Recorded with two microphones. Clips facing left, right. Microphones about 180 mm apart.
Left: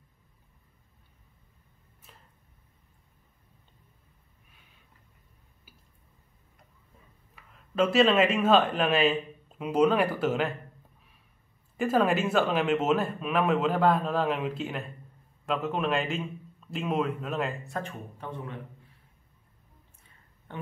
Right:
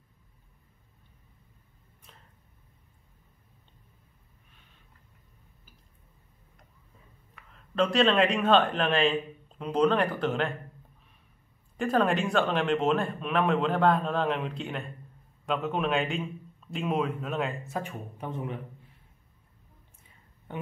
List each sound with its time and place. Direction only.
2.1 s a sound: 5° left (ahead or behind)
7.5 s speech: 5° left (ahead or behind)
11.7 s speech: 5° left (ahead or behind)
17.8 s speech: 15° right (ahead or behind)